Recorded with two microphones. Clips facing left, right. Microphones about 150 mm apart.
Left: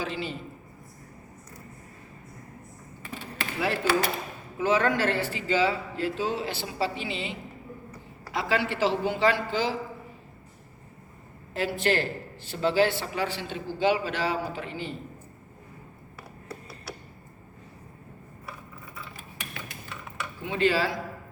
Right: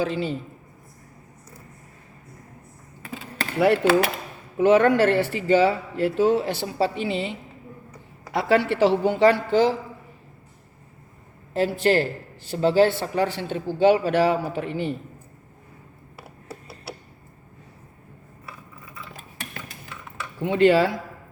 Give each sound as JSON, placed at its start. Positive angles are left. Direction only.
{"t": 0.0, "sound": "a woman's voice", "side_deg": -50}
{"t": 3.6, "sound": "speech", "side_deg": -60}
{"t": 8.3, "sound": "a woman's voice", "side_deg": -55}
{"t": 11.5, "sound": "speech", "side_deg": -35}
{"t": 13.5, "sound": "speech", "side_deg": -55}
{"t": 20.4, "sound": "speech", "side_deg": -55}